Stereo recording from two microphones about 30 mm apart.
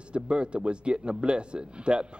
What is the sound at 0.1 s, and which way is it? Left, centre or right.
A man's voice, right.